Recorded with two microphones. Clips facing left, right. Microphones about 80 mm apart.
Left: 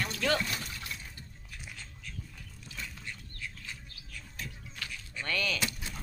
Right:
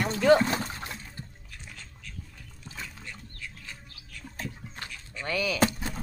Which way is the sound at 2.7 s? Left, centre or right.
Right.